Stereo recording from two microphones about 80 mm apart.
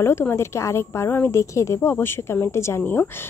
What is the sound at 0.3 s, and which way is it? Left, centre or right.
Speech, left.